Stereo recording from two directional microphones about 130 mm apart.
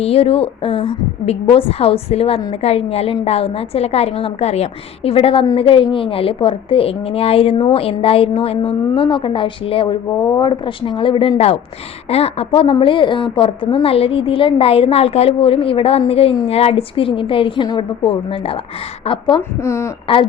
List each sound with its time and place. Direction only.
0.0 s a woman's voice: 50° left (ahead or behind)
10.2 s speech: 25° left (ahead or behind)
10.4 s a woman's voice: 40° left (ahead or behind)
19.4 s speech: 20° left (ahead or behind)